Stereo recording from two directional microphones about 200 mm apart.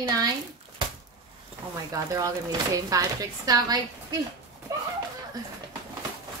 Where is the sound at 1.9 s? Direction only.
15° right (ahead or behind).